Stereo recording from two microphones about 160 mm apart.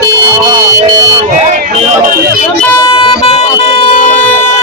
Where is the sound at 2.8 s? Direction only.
30° left (ahead or behind).